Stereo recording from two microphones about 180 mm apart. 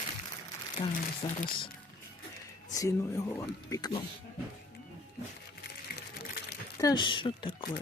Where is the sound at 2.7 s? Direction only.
15° left (ahead or behind).